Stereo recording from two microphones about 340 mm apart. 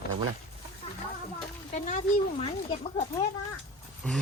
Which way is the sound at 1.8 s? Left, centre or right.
Centre.